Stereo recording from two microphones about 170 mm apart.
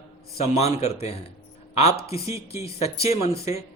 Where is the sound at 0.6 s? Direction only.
40° left (ahead or behind).